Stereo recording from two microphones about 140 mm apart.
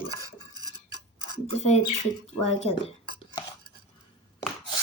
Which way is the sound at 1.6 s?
50° left (ahead or behind).